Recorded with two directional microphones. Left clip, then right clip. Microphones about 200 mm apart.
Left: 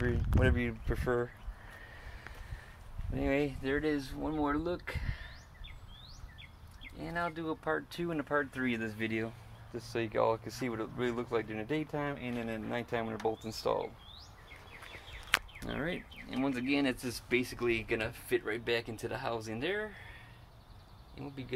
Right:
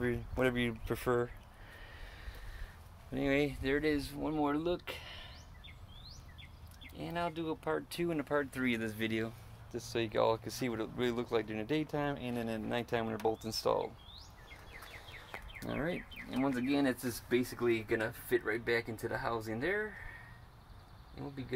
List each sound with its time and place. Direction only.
0.0 s speech: centre (ahead or behind)
3.1 s speech: centre (ahead or behind)
7.0 s speech: centre (ahead or behind)
15.6 s speech: 15° right (ahead or behind)